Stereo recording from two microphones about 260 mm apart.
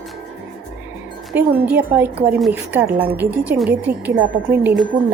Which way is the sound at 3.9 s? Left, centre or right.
Right.